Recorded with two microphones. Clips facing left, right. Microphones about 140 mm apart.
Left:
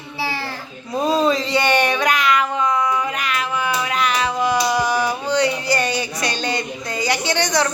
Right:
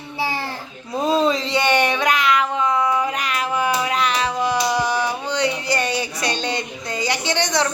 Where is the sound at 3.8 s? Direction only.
30° right (ahead or behind).